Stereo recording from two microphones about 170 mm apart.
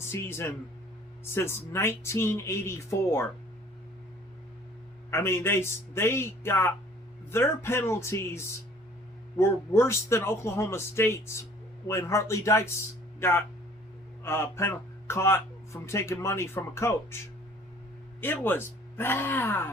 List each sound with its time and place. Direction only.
0.1 s speech: 15° left (ahead or behind)
5.1 s speech: 15° left (ahead or behind)
18.2 s speech: 10° left (ahead or behind)